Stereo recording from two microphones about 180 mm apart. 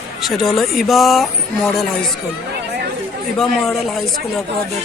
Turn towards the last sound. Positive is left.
turn(degrees=0)  # may be behind; listen again after turning